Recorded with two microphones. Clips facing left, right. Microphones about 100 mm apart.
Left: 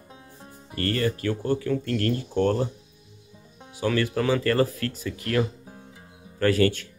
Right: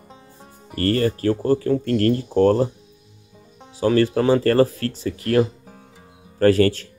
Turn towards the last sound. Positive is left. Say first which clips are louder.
# right 6 dB
turn(degrees=-35)  # may be behind; listen again after turning